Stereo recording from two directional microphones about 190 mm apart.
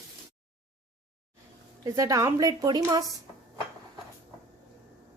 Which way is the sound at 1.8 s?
15° right (ahead or behind).